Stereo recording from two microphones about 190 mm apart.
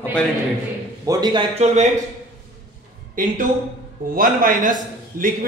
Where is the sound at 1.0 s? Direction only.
20° right (ahead or behind).